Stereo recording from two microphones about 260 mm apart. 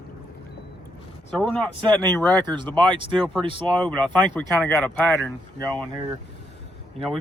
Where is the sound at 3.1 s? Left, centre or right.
Centre.